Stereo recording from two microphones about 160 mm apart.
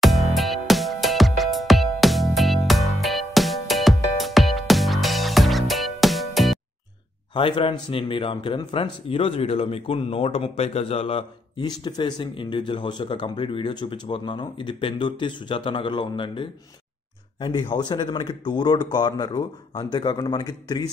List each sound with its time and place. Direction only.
0.0 s music: centre (ahead or behind)
7.3 s speech: 35° left (ahead or behind)